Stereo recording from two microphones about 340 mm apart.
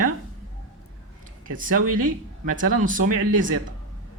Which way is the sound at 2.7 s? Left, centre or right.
Right.